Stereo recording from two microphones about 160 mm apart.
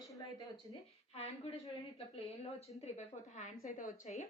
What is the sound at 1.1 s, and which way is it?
A woman's voice, 40° left (ahead or behind).